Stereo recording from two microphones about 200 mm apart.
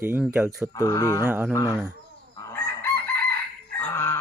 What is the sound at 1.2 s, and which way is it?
Speech, 10° right (ahead or behind).